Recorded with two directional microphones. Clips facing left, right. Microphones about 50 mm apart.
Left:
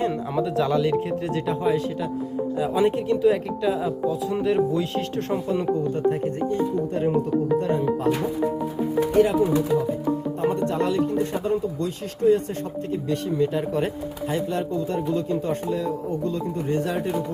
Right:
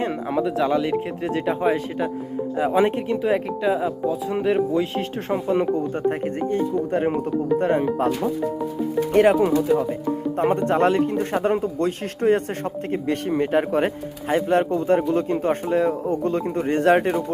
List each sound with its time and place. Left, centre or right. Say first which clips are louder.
0.0 s speech: right 1 dB; right
9.1 s speech: right 4 dB; right
14.4 s speech: right 6 dB; right